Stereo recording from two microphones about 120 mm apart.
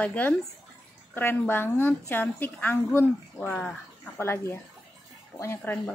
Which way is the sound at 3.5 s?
10° left (ahead or behind).